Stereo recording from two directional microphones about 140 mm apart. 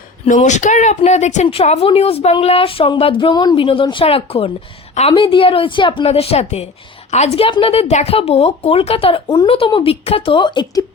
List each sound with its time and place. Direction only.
0.3 s a woman's voice: 60° left (ahead or behind); by 10.8 s 35° left (ahead or behind)